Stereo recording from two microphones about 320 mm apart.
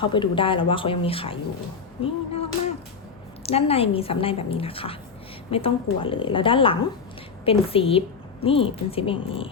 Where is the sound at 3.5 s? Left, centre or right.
Centre.